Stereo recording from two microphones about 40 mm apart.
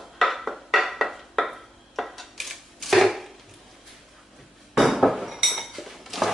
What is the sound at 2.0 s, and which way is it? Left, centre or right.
Dishes, centre.